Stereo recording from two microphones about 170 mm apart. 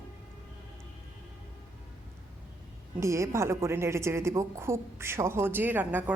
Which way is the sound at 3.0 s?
15° right (ahead or behind).